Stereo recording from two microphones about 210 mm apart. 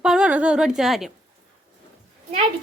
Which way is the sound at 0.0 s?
5° right (ahead or behind).